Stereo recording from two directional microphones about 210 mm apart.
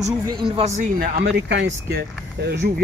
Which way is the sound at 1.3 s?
60° right (ahead or behind).